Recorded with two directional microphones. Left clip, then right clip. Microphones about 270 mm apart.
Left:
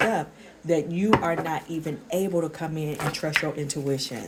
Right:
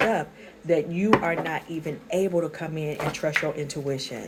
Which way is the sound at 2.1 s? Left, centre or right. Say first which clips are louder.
Right 2 dB; left.